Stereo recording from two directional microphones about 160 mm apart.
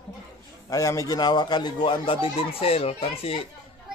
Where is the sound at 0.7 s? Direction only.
20° left (ahead or behind); by 3.4 s 40° left (ahead or behind).